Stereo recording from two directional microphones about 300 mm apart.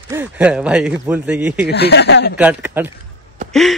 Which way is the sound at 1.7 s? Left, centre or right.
Left.